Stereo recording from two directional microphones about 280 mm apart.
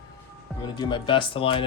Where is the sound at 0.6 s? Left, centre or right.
Centre.